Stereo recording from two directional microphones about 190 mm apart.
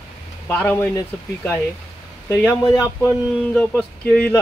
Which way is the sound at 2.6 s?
15° left (ahead or behind).